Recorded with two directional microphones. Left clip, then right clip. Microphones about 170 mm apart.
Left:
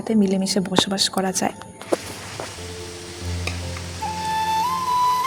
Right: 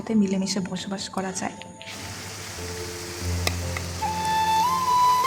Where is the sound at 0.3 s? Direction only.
20° left (ahead or behind).